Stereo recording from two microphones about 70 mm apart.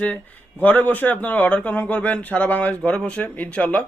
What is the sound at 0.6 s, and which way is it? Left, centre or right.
A man's voice, left.